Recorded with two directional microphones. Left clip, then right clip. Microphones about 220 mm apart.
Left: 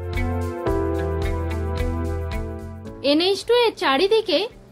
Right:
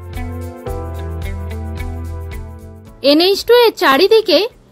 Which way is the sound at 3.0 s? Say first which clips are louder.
Right 8 dB; 30° right (ahead or behind).